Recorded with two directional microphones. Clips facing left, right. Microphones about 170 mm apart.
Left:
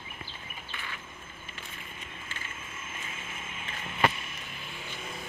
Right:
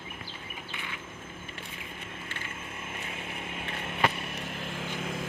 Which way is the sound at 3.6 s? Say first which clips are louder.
Left 1 dB; 65° right (ahead or behind).